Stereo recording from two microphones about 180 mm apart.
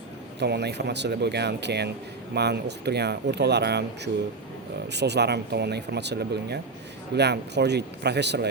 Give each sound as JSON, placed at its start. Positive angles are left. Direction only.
{"t": 0.3, "sound": "speech", "side_deg": -70}